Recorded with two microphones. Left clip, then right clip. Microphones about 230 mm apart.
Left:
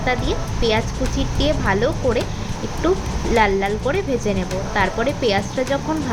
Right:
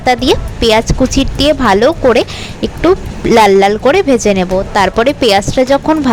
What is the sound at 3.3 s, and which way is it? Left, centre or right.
A woman's voice, right.